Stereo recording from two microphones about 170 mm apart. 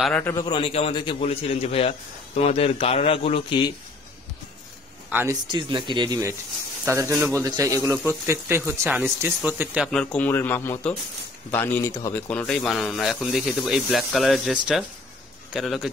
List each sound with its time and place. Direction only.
0.0 s speech: 10° left (ahead or behind)
0.5 s a man's voice: 35° left (ahead or behind)
5.1 s a man's voice: 15° right (ahead or behind)
5.5 s a man's voice: 30° right (ahead or behind); by 9.8 s 10° right (ahead or behind)
9.8 s a man's voice: 5° left (ahead or behind)